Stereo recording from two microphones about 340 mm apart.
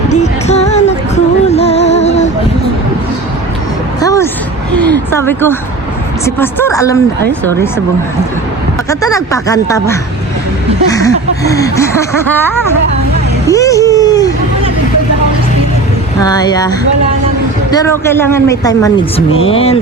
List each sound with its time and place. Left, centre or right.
0.1 s music: centre
4.0 s a sound: centre
6.2 s speech: centre
8.9 s speech: centre
13.5 s a sound: centre
16.2 s speech: centre